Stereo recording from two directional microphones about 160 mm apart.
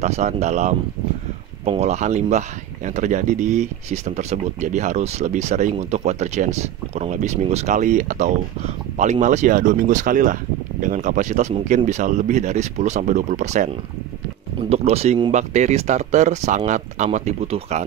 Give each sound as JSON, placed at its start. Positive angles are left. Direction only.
{"t": 0.0, "sound": "speech", "side_deg": -45}
{"t": 14.7, "sound": "speech", "side_deg": -40}